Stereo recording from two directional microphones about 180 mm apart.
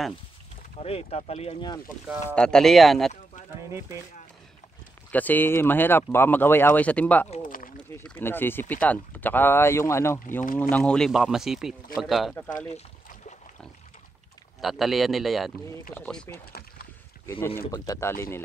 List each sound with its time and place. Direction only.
0.7 s speech: 35° left (ahead or behind)
2.3 s speech: 5° left (ahead or behind)
5.1 s speech: 10° left (ahead or behind)
7.2 s a sound: 35° left (ahead or behind)
7.9 s speech: 10° left (ahead or behind)
14.6 s speech: centre (ahead or behind)
17.6 s speech: 20° left (ahead or behind)